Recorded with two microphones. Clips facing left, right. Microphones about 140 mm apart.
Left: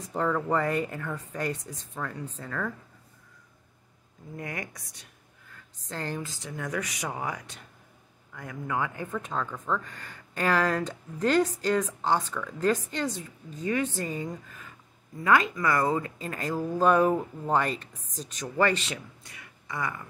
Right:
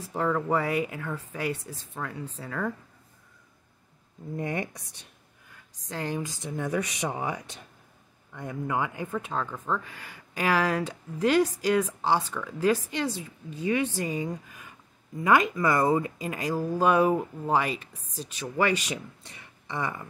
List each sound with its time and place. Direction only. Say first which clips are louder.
0.0 s speech: even; 5° right (ahead or behind)
4.4 s speech: right 6 dB; 30° right (ahead or behind)
5.5 s speech: right 1 dB; 10° right (ahead or behind)
19.2 s speech: right 1 dB; 30° right (ahead or behind)